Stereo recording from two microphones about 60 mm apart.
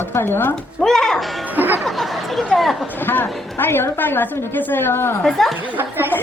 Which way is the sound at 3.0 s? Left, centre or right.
Left.